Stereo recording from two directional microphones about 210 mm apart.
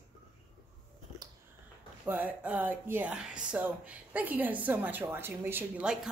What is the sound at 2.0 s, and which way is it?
Speech, 10° right (ahead or behind).